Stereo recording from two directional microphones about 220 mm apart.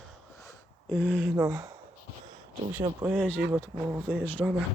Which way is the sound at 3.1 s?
Centre (ahead or behind).